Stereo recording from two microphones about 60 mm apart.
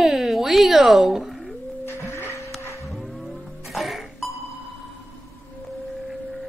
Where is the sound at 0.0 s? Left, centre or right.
Centre.